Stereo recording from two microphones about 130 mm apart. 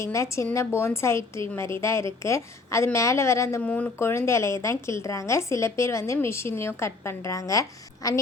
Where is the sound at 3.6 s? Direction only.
10° left (ahead or behind).